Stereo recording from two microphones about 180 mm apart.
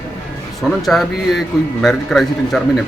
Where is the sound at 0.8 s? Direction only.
Centre (ahead or behind).